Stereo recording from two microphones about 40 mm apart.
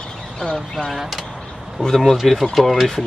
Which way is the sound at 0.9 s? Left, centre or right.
Centre.